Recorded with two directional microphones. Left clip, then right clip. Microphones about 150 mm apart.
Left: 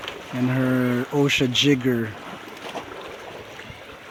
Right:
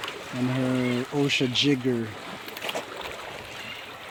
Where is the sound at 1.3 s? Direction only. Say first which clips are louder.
Left 3 dB; 25° left (ahead or behind).